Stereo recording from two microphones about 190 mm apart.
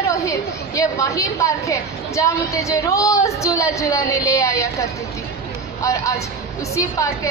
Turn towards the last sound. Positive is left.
turn(degrees=15)  # may be behind; listen again after turning